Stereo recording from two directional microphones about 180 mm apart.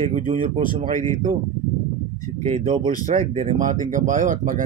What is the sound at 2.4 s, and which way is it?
Speech, 30° right (ahead or behind).